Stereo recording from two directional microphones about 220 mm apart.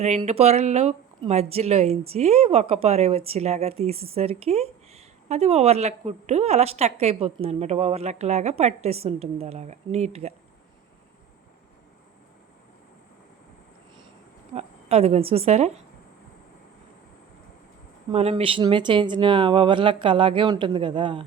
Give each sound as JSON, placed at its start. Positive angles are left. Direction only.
{"t": 0.0, "sound": "speech", "side_deg": -30}
{"t": 14.5, "sound": "speech", "side_deg": -30}
{"t": 18.1, "sound": "speech", "side_deg": -25}